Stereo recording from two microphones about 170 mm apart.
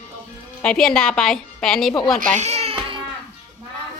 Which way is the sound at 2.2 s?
40° right (ahead or behind).